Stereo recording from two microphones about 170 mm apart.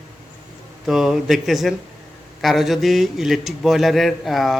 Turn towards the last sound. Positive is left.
turn(degrees=0)  # may be behind; listen again after turning